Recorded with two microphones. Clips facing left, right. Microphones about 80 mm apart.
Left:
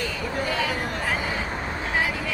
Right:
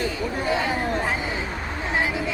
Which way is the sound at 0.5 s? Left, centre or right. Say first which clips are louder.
Right 4 dB; right.